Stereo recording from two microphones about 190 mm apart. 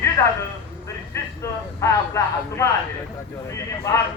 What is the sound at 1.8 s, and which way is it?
Speech, 15° left (ahead or behind).